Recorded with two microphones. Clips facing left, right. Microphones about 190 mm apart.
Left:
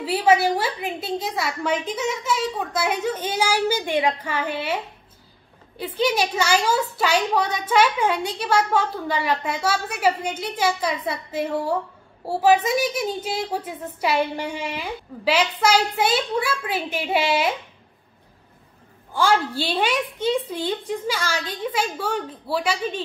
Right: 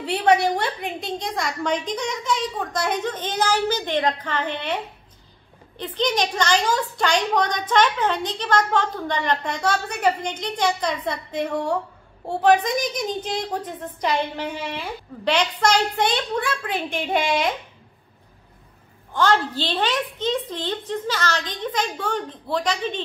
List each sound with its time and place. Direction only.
0.0 s a woman's voice: 5° left (ahead or behind)
5.8 s a woman's voice: 10° left (ahead or behind)
19.1 s a woman's voice: 10° left (ahead or behind)